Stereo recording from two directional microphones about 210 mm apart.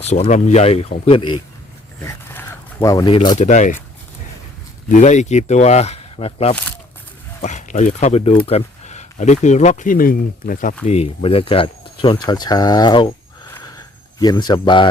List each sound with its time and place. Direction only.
0.0 s speech: 30° left (ahead or behind)
2.0 s zipper: 15° left (ahead or behind)
3.2 s speech: 30° left (ahead or behind)
4.9 s speech: 35° left (ahead or behind)
14.2 s speech: 20° left (ahead or behind)